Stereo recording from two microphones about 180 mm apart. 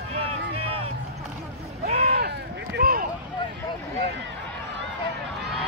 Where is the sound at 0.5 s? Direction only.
30° right (ahead or behind).